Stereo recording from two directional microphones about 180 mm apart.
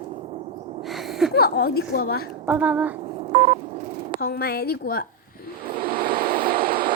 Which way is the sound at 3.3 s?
40° right (ahead or behind).